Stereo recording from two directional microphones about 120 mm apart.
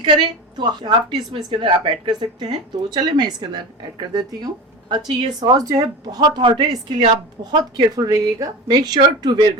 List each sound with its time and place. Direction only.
0.5 s a woman's voice: 40° right (ahead or behind)